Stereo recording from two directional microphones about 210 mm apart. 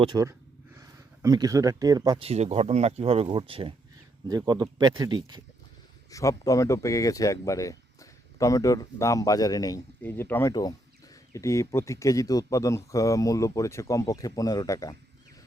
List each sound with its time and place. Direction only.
0.0 s speech: 20° right (ahead or behind)
6.1 s speech: 15° left (ahead or behind)